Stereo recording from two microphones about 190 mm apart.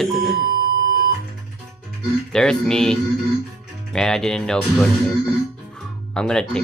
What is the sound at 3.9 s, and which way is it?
Speech, 5° left (ahead or behind).